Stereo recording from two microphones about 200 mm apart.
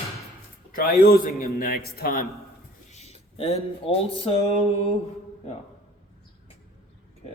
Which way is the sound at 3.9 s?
30° left (ahead or behind).